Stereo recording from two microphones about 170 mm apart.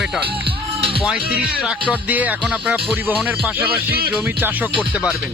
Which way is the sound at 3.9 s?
65° right (ahead or behind).